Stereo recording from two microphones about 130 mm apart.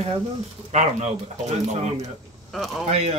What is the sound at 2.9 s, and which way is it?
Speech, 50° right (ahead or behind).